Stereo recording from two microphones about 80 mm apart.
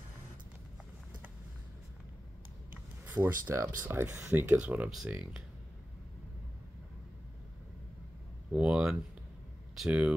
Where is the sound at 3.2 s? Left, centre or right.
Right.